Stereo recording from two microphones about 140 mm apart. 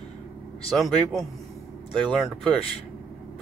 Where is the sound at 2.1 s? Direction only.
Centre (ahead or behind).